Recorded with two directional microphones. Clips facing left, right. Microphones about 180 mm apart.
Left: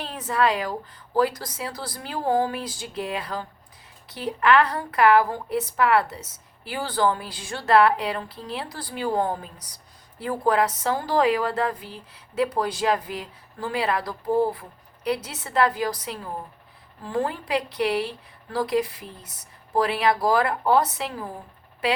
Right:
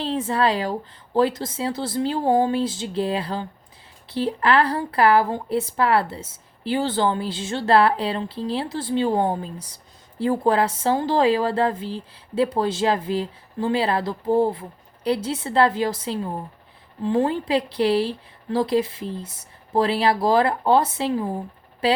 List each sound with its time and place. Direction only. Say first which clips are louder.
0.0 s speech: right 3 dB; 30° right (ahead or behind)